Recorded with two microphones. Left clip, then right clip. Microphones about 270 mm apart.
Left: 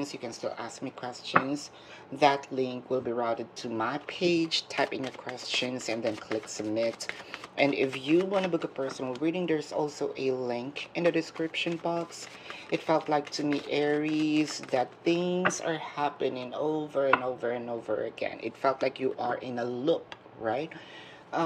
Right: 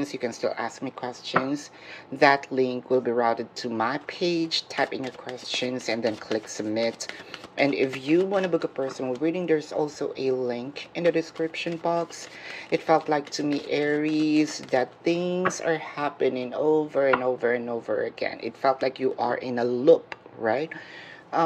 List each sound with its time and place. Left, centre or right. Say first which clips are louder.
0.0 s speech: right 7 dB; centre